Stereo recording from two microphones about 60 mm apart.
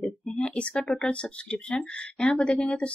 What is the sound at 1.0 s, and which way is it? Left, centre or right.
Speech, centre.